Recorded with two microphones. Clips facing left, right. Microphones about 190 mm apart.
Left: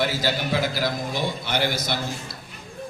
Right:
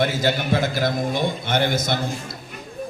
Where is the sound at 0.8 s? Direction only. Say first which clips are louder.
Right 4 dB; 50° right (ahead or behind).